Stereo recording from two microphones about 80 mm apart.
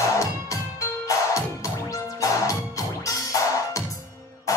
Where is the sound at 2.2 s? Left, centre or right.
Left.